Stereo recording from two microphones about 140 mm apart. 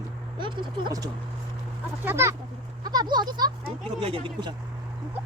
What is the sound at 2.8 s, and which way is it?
Speech, 30° right (ahead or behind).